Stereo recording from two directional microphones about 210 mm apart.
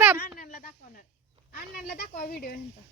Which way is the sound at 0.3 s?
45° left (ahead or behind).